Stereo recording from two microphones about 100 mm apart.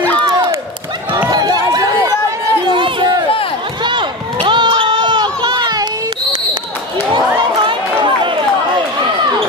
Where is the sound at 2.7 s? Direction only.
55° right (ahead or behind).